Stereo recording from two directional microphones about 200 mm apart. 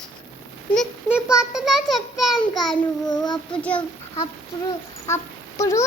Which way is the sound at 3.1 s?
20° left (ahead or behind).